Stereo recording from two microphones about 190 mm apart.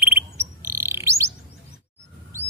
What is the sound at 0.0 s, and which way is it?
Bird, 10° right (ahead or behind).